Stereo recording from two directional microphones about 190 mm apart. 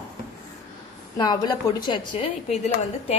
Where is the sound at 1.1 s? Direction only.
20° left (ahead or behind).